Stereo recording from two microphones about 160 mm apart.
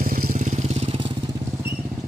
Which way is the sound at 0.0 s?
60° right (ahead or behind).